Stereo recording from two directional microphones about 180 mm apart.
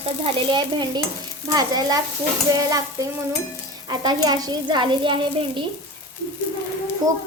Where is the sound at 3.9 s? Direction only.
25° right (ahead or behind).